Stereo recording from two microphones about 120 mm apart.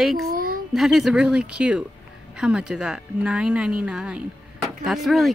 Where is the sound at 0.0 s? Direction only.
Centre (ahead or behind).